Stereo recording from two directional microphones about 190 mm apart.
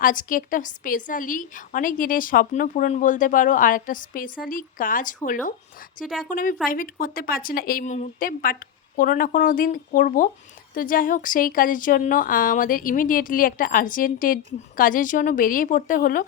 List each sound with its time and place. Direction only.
0.0 s a woman's voice: 45° left (ahead or behind)